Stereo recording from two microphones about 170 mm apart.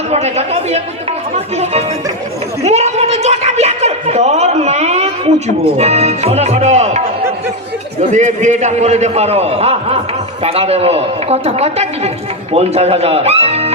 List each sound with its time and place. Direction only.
0.1 s a man's voice: 40° right (ahead or behind)
2.6 s a man's voice: 40° right (ahead or behind)
8.1 s a man's voice: 45° right (ahead or behind)